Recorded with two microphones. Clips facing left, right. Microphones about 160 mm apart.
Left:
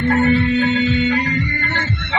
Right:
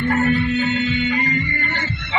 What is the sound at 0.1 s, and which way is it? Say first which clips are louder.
Music: left 4 dB; 30° left (ahead or behind).